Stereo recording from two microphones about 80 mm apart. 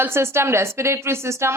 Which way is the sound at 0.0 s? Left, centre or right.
Right.